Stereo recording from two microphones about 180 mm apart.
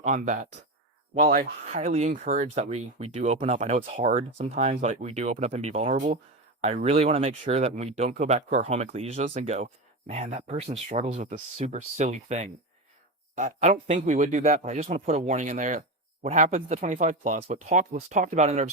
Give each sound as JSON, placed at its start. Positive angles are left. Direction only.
{"t": 0.0, "sound": "speech", "side_deg": -40}